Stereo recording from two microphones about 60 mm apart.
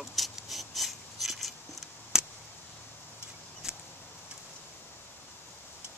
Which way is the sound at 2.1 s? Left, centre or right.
Centre.